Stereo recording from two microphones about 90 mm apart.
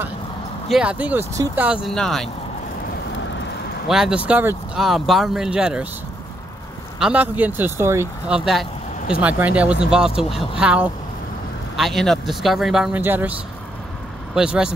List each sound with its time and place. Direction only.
0.7 s speech: 5° right (ahead or behind)
0.9 s speech: 15° right (ahead or behind)
1.9 s speech: 5° left (ahead or behind)
3.9 s speech: 10° right (ahead or behind)
4.7 s speech: centre (ahead or behind)
7.0 s speech: 15° right (ahead or behind); by 8.1 s 30° right (ahead or behind)
8.3 s speech: 10° right (ahead or behind)
11.7 s speech: centre (ahead or behind)
12.9 s speech: 20° right (ahead or behind)
14.3 s speech: 10° right (ahead or behind)